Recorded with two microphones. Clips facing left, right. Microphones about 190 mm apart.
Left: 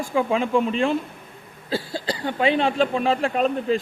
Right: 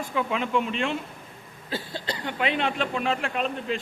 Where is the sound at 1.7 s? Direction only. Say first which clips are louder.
Left 6 dB; 10° left (ahead or behind).